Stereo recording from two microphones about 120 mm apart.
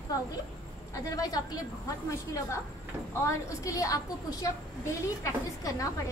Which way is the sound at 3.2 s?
25° left (ahead or behind).